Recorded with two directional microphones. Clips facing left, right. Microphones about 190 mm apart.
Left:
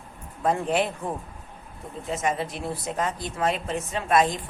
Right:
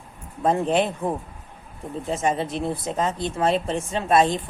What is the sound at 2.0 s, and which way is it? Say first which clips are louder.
Speech: right 3 dB; 30° right (ahead or behind).